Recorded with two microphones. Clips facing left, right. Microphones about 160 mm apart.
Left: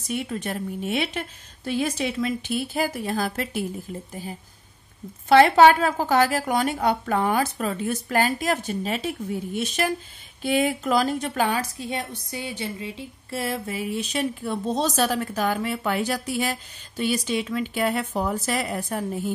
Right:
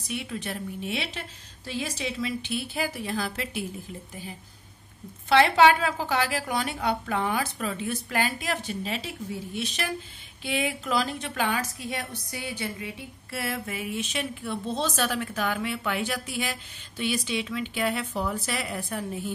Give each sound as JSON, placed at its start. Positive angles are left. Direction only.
{"t": 0.1, "sound": "a woman's voice", "side_deg": 45}